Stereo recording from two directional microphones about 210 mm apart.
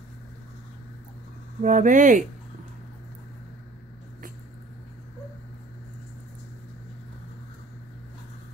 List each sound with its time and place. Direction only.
1.6 s speech: 40° right (ahead or behind)